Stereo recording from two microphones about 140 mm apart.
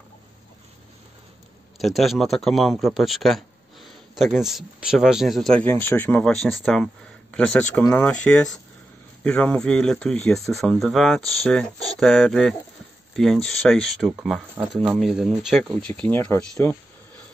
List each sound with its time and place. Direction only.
1.8 s speech: centre (ahead or behind); by 16.7 s 15° left (ahead or behind)